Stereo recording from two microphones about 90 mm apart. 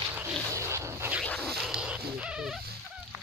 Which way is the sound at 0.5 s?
30° right (ahead or behind).